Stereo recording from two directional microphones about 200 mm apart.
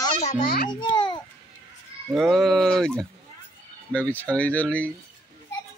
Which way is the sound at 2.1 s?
Centre (ahead or behind).